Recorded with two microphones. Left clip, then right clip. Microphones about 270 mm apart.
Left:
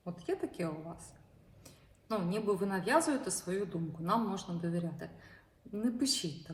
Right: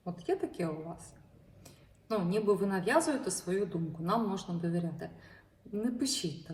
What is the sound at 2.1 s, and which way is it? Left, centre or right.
Speech, centre.